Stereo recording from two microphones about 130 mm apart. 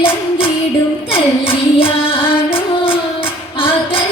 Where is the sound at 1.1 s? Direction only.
45° left (ahead or behind).